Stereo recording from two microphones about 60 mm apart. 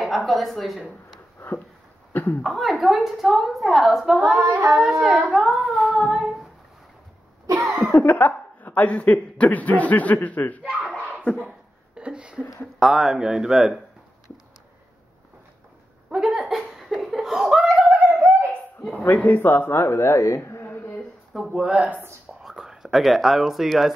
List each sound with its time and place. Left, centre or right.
0.0 s a woman's voice: centre
2.4 s a woman's voice: centre
4.4 s singing: right
4.6 s a woman's voice: centre
7.4 s cough: right
8.0 s a woman's voice: left
11.9 s speech: centre
12.7 s speech: centre
16.1 s a sound: centre
16.7 s laughter: centre
17.8 s a sound: right
18.8 s a sound: centre
19.0 s speech: left
21.5 s speech: centre